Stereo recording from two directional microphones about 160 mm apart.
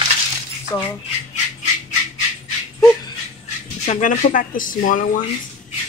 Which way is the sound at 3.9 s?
50° left (ahead or behind).